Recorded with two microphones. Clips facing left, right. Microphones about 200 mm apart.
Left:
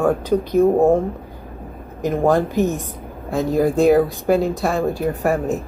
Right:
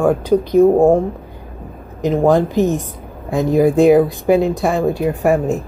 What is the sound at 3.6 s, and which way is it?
Speech, centre (ahead or behind).